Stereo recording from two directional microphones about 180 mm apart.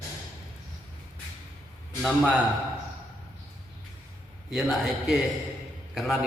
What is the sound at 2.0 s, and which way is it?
Speech, centre (ahead or behind).